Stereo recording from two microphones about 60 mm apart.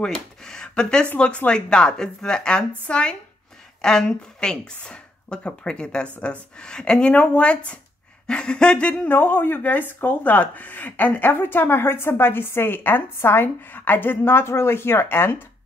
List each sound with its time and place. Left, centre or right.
0.0 s a sound: centre
1.1 s speech: left
9.1 s a woman's voice: left